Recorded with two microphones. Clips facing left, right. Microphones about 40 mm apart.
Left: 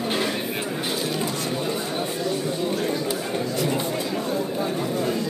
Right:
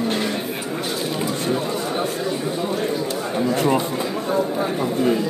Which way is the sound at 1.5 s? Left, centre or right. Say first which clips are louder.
Right 3 dB; centre.